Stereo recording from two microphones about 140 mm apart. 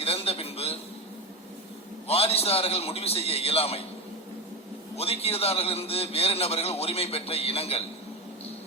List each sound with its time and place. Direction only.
0.0 s a sound: 45° left (ahead or behind)
2.0 s a man's voice: 45° left (ahead or behind)
4.9 s a man's voice: 45° left (ahead or behind)